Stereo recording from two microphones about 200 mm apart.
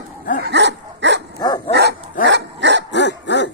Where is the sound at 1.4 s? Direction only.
20° left (ahead or behind).